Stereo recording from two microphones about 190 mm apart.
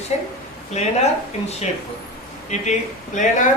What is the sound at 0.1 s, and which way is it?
Speech, 35° left (ahead or behind).